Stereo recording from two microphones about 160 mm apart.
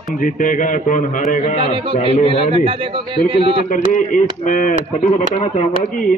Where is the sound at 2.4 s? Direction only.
40° right (ahead or behind).